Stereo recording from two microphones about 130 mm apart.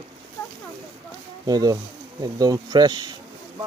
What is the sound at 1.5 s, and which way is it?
Speech, 30° right (ahead or behind).